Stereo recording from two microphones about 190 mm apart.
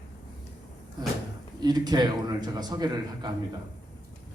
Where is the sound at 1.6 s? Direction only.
20° right (ahead or behind).